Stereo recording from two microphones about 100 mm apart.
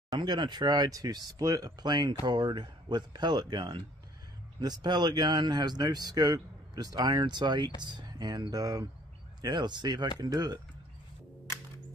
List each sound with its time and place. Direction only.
0.1 s speech: 50° right (ahead or behind)
9.4 s speech: 45° right (ahead or behind)